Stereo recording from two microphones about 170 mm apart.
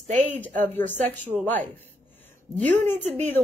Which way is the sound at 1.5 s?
10° left (ahead or behind).